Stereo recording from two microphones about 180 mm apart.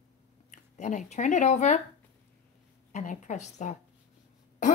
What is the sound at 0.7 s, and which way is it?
A woman's voice, 40° left (ahead or behind).